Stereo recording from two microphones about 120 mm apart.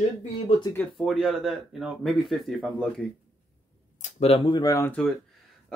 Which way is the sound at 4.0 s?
65° left (ahead or behind).